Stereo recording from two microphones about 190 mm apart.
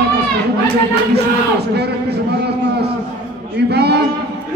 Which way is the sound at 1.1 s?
60° right (ahead or behind).